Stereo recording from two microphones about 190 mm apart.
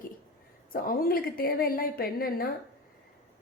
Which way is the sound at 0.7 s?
50° left (ahead or behind).